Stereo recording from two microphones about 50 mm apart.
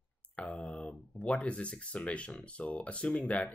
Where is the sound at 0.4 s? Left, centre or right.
Left.